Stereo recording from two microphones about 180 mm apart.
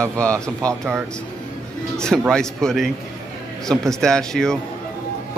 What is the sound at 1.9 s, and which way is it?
A man's voice, 5° left (ahead or behind).